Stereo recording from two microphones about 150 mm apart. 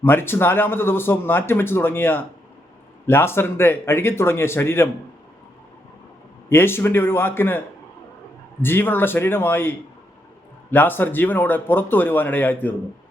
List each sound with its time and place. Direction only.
0.0 s speech: 15° left (ahead or behind)
6.5 s speech: 15° left (ahead or behind)
8.6 s speech: 15° left (ahead or behind)